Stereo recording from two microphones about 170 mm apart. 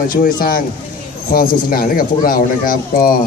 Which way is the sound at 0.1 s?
55° left (ahead or behind).